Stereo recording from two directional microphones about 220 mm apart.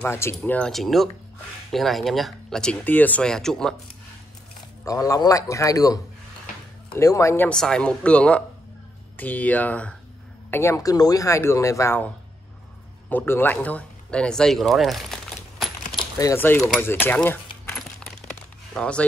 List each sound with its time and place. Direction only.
0.0 s speech: 10° left (ahead or behind)
4.8 s speech: 15° left (ahead or behind)
13.1 s speech: 10° left (ahead or behind)
16.0 s speech: 15° left (ahead or behind)
18.2 s music: 5° left (ahead or behind)